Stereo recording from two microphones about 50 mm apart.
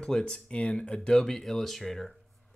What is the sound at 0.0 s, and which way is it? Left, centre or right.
Speech, centre.